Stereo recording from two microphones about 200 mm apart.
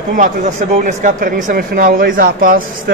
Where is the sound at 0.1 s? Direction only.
40° right (ahead or behind).